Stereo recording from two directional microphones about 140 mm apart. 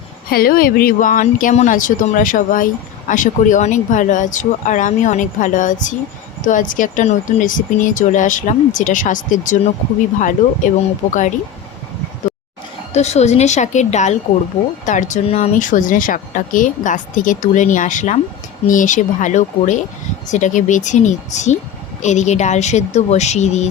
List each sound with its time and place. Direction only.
0.3 s speech: 90° left; by 11.3 s 65° left (ahead or behind)
12.9 s a woman's voice: 50° left (ahead or behind)